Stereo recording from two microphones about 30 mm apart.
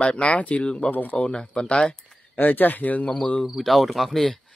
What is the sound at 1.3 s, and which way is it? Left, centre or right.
Speech, left.